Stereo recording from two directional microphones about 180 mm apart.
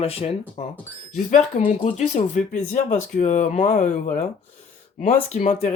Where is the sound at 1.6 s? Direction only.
40° left (ahead or behind).